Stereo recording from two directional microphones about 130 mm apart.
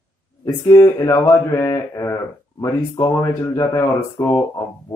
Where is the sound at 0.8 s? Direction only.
25° left (ahead or behind).